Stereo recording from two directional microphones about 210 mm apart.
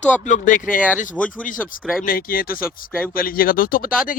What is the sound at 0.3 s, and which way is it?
Speech, 40° left (ahead or behind).